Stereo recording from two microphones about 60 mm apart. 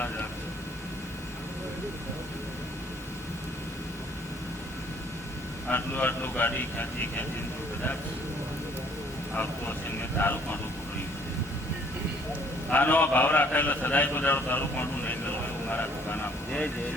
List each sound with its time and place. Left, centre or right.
5.7 s a man's voice: left
9.3 s vehicle: left
10.2 s speech: left
12.7 s a man's voice: left